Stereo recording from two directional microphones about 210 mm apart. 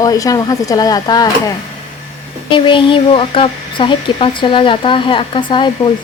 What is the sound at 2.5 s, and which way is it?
Speech, 25° left (ahead or behind).